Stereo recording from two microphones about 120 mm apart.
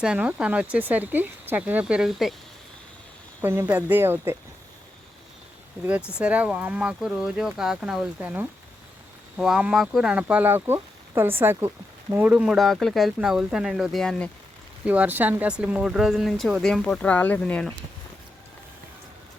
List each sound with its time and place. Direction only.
0.0 s speech: 10° right (ahead or behind)
3.4 s speech: 20° right (ahead or behind)
6.1 s speech: 10° right (ahead or behind)
12.5 s speech: centre (ahead or behind)
14.8 s speech: 15° right (ahead or behind); by 17.7 s 10° left (ahead or behind)